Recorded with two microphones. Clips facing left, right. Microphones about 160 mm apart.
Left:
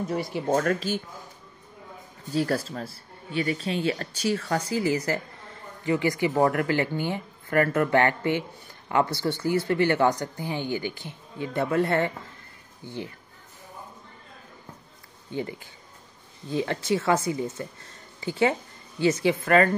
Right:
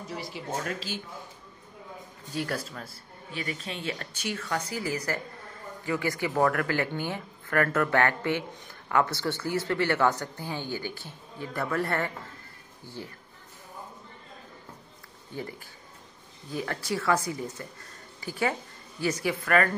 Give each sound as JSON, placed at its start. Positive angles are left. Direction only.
{"t": 0.1, "sound": "speech", "side_deg": 55}
{"t": 2.3, "sound": "speech", "side_deg": 35}
{"t": 16.4, "sound": "speech", "side_deg": 25}